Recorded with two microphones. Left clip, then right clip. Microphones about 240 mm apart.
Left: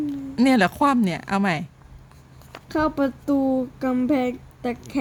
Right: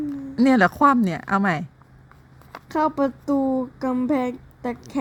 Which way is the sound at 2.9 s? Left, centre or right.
Centre.